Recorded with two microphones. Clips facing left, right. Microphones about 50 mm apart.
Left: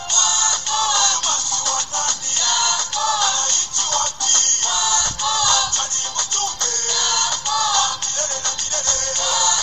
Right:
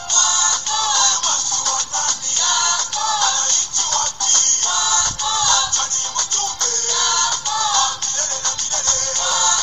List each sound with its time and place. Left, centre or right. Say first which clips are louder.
0.1 s music: right 1 dB; left
1.3 s music: even; right
2.0 s music: right 1 dB; left
9.2 s music: right 1 dB; right